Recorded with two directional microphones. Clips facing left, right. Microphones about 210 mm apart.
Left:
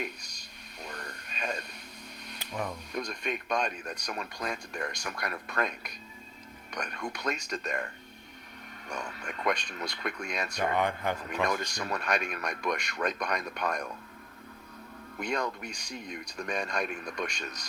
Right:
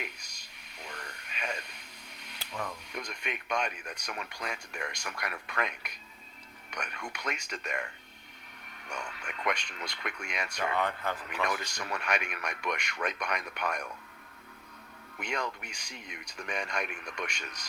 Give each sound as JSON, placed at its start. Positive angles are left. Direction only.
{"t": 0.9, "sound": "radio", "side_deg": 35}
{"t": 2.5, "sound": "a sound", "side_deg": 15}
{"t": 2.9, "sound": "speech", "side_deg": 35}
{"t": 6.7, "sound": "speech", "side_deg": 35}
{"t": 8.9, "sound": "speech", "side_deg": 35}
{"t": 10.6, "sound": "speech", "side_deg": 20}
{"t": 11.4, "sound": "speech", "side_deg": 40}
{"t": 15.2, "sound": "speech", "side_deg": 35}